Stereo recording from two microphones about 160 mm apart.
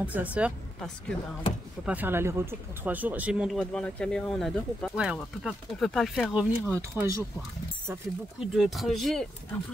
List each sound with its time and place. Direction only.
0.0 s speech: 10° right (ahead or behind)
0.7 s speech: 5° left (ahead or behind)
1.9 s speech: 10° right (ahead or behind)
6.7 s speech: 20° right (ahead or behind)
8.5 s speech: centre (ahead or behind)